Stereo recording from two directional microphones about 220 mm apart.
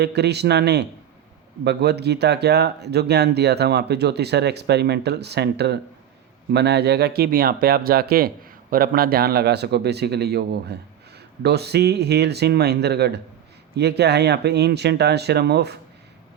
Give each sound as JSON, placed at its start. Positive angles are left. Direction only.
{"t": 0.0, "sound": "speech", "side_deg": -50}